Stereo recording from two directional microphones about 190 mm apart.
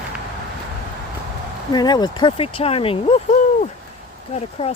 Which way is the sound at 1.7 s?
20° left (ahead or behind).